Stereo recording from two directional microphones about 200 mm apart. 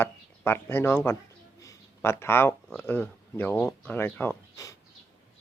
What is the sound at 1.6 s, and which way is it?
Speech, 10° left (ahead or behind).